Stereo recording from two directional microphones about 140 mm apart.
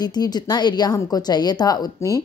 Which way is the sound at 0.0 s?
30° left (ahead or behind).